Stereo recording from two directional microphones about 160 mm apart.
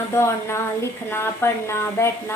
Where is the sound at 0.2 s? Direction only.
15° left (ahead or behind).